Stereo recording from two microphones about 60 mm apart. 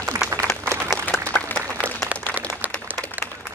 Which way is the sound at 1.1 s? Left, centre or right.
Left.